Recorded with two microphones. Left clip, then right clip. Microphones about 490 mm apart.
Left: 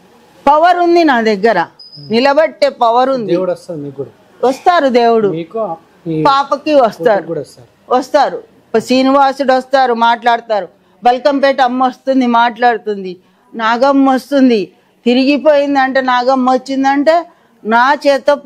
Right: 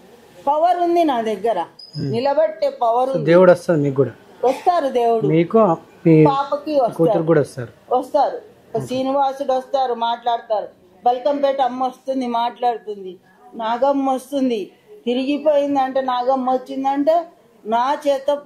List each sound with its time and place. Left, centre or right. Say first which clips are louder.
0.5 s speech: left 8 dB; left
3.3 s speech: right 4 dB; right
4.4 s a woman's voice: left 7 dB; left
5.3 s speech: right 4 dB; right
6.2 s speech: left 6 dB; left
7.2 s speech: right 5 dB; right
7.9 s speech: left 6 dB; left
8.8 s speech: left 9 dB; left
12.2 s speech: left 10 dB; left
13.6 s speech: left 7 dB; left
13.9 s a woman's voice: left 9 dB; left